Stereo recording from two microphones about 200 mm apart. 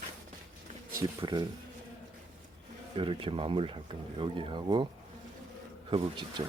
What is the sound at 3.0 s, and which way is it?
Speech, 25° right (ahead or behind).